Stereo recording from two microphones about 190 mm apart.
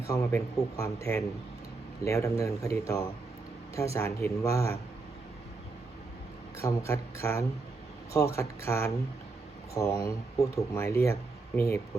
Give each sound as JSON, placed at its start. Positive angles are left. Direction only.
{"t": 0.1, "sound": "speech", "side_deg": 15}
{"t": 6.6, "sound": "speech", "side_deg": 15}